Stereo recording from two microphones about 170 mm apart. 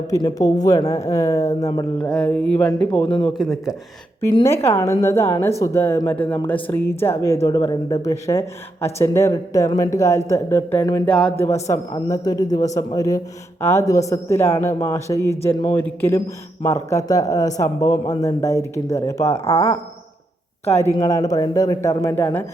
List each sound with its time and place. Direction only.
0.1 s a man's voice: 20° left (ahead or behind)
2.0 s speech: 5° left (ahead or behind)
4.4 s a man's voice: 15° left (ahead or behind)
19.3 s speech: 35° left (ahead or behind)
20.7 s a man's voice: 15° left (ahead or behind)